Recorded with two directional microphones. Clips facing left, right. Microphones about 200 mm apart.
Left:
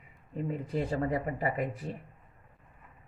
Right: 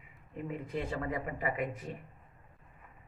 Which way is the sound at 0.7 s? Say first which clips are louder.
Left 5 dB; 35° left (ahead or behind).